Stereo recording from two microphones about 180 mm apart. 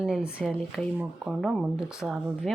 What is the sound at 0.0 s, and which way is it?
Speech, 5° right (ahead or behind).